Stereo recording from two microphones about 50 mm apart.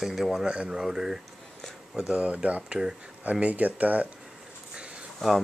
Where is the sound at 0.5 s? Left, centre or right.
Centre; by 4.1 s right.